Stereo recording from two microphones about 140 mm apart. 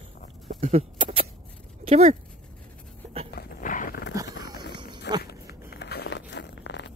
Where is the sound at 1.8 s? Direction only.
50° right (ahead or behind).